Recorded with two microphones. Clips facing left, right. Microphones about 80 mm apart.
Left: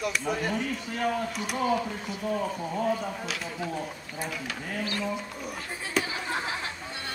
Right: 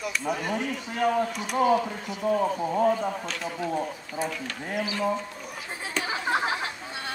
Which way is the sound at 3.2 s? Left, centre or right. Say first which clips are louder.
Right 2 dB; centre.